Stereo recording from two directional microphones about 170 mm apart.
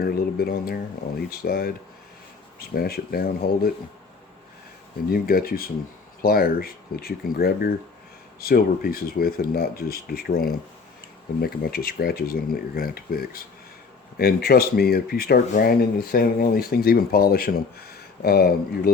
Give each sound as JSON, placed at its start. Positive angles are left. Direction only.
{"t": 0.0, "sound": "speech", "side_deg": 65}
{"t": 5.0, "sound": "speech", "side_deg": 60}